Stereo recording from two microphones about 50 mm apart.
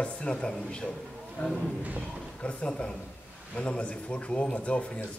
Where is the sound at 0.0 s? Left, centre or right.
Left.